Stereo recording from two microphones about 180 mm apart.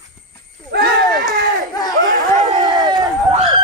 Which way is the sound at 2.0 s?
45° right (ahead or behind).